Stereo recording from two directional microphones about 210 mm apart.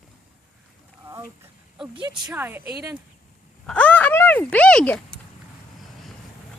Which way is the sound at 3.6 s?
5° left (ahead or behind).